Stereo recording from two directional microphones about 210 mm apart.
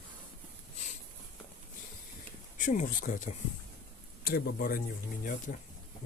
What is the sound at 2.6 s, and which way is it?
Speech, 40° left (ahead or behind).